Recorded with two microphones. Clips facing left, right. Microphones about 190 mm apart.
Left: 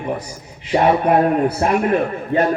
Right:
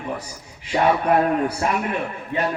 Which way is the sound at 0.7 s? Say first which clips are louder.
Left 4 dB; 30° left (ahead or behind).